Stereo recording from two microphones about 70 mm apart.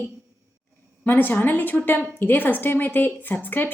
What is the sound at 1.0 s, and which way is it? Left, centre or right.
A woman's voice, left.